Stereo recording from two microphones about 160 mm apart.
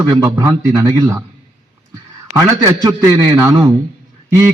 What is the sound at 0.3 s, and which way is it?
Speech, 15° right (ahead or behind).